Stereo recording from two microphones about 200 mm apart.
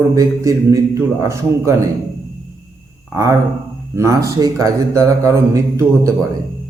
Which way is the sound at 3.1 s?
15° right (ahead or behind).